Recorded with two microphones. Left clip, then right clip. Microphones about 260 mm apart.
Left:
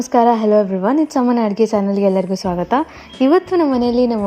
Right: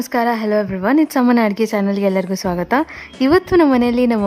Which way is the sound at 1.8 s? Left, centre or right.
Right.